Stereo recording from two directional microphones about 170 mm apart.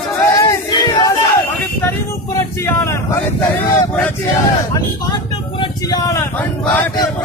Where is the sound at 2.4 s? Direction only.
20° left (ahead or behind).